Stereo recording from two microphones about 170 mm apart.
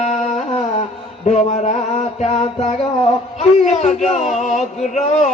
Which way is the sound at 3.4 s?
40° left (ahead or behind).